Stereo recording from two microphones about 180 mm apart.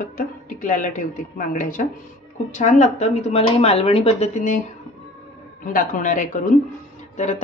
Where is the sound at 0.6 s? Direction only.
50° left (ahead or behind).